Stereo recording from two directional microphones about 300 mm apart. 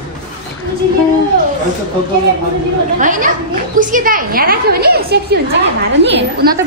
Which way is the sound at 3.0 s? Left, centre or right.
Right.